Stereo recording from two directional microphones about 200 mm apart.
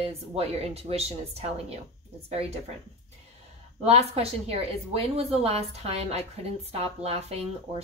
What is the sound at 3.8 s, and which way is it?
A woman's voice, 30° right (ahead or behind).